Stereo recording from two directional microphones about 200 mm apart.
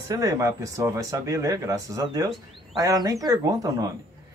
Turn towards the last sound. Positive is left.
turn(degrees=-15)  # may be behind; listen again after turning